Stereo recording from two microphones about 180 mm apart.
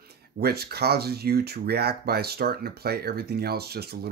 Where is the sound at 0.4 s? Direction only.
60° right (ahead or behind).